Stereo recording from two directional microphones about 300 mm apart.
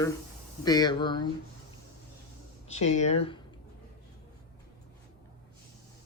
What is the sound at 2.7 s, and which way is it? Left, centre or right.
Speech, left.